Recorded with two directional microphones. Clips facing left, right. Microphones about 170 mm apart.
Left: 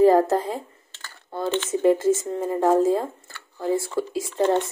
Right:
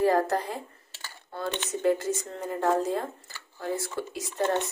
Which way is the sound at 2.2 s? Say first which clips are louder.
Left 6 dB; 20° left (ahead or behind).